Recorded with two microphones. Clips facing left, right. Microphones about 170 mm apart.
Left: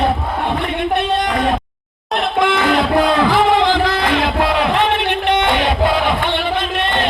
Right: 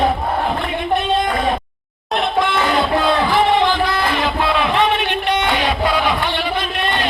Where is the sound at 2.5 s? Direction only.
90° left; by 4.7 s 70° left (ahead or behind).